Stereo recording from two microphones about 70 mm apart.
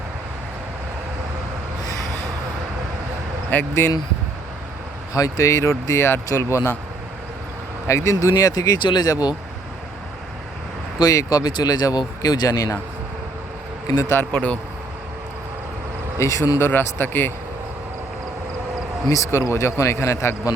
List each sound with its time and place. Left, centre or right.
3.5 s speech: left
5.1 s a man's voice: left
7.9 s a man's voice: left
9.0 s speech: left
11.0 s speech: left
13.9 s speech: left
14.3 s speech: centre
16.1 s a man's voice: left
16.6 s speech: left
19.1 s a man's voice: left